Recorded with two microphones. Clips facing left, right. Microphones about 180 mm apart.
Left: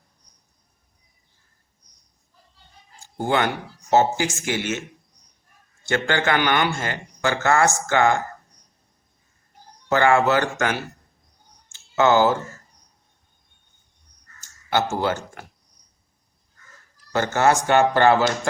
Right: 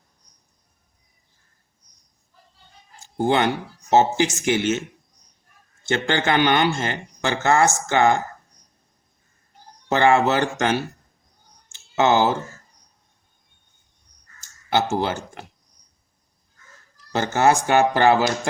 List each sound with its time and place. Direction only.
3.2 s a man's voice: 20° right (ahead or behind)
5.8 s a man's voice: 20° right (ahead or behind)
9.9 s a man's voice: 20° right (ahead or behind)
11.9 s a man's voice: 20° right (ahead or behind)
14.7 s a man's voice: 20° right (ahead or behind)
17.2 s speech: 15° right (ahead or behind)